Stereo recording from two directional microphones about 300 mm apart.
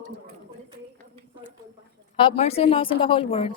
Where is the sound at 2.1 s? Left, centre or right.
Centre.